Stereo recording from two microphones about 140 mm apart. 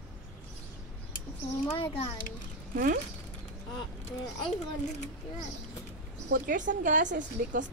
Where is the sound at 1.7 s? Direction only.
40° left (ahead or behind).